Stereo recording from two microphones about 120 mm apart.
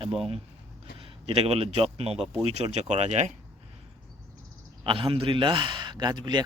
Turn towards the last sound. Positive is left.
turn(degrees=-40)  # may be behind; listen again after turning